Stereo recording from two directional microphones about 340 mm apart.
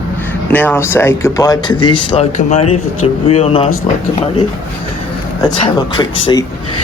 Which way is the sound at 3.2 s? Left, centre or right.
Centre.